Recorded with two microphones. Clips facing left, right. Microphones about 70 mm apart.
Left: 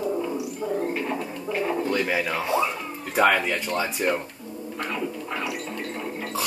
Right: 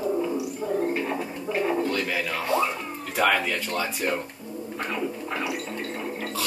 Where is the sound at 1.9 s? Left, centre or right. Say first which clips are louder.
Left 3 dB; centre.